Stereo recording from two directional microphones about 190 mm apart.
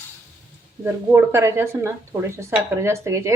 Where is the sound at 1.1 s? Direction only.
15° right (ahead or behind).